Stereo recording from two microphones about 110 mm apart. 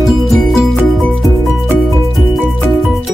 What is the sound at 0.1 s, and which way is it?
Music, centre (ahead or behind).